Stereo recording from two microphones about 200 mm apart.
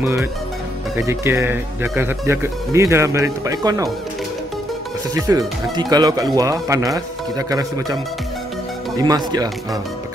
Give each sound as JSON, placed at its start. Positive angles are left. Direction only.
{"t": 0.0, "sound": "speech", "side_deg": -10}
{"t": 5.3, "sound": "speech", "side_deg": -15}